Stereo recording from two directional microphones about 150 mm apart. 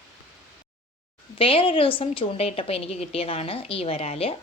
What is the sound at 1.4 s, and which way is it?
A woman's voice, 35° left (ahead or behind).